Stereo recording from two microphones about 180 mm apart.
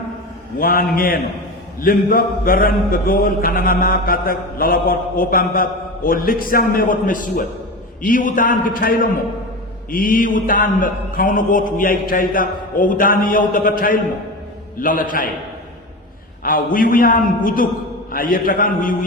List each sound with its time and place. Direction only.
0.6 s mantra: 55° left (ahead or behind)
16.4 s a man's voice: 50° left (ahead or behind)
16.7 s mantra: 50° left (ahead or behind)